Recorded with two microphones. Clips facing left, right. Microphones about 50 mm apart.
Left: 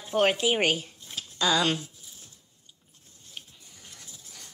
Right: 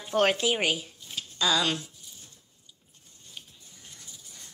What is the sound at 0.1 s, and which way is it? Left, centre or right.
Speech, centre.